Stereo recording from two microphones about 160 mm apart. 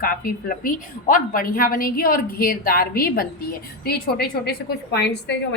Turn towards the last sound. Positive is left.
turn(degrees=90)